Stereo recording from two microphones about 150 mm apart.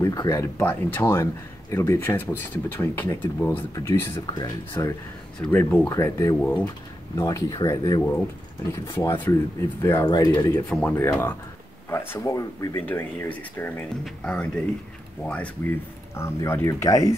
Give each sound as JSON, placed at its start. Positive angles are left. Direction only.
{"t": 0.0, "sound": "a man's voice", "side_deg": 25}
{"t": 7.2, "sound": "speech", "side_deg": 25}
{"t": 10.7, "sound": "a man's voice", "side_deg": 10}
{"t": 12.8, "sound": "a man's voice", "side_deg": 15}